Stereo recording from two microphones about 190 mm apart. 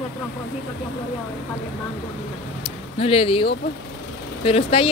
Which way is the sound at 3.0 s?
30° left (ahead or behind).